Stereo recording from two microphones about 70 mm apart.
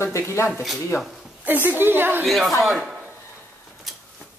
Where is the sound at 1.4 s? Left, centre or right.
Right.